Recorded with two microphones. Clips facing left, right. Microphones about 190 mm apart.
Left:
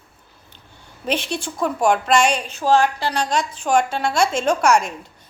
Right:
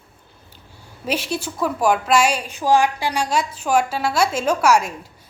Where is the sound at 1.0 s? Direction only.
5° right (ahead or behind).